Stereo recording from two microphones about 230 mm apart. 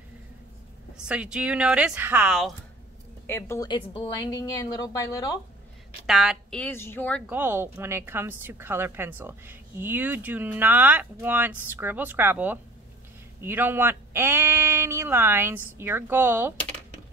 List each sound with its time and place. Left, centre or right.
0.9 s speech: centre
3.3 s a woman's voice: centre
6.0 s speech: centre
7.2 s a woman's voice: centre